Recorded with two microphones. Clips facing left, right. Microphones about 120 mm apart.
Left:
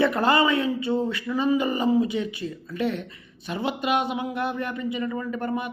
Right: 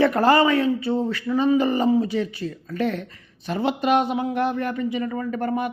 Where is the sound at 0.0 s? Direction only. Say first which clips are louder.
Right 4 dB; 40° right (ahead or behind).